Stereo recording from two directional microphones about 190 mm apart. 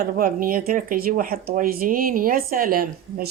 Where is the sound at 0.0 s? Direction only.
50° right (ahead or behind).